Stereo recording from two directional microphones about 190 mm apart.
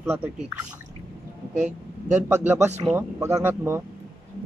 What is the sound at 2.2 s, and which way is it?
Speech, 10° right (ahead or behind).